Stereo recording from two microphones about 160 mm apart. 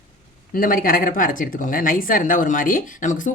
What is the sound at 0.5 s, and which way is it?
Speech, 60° left (ahead or behind).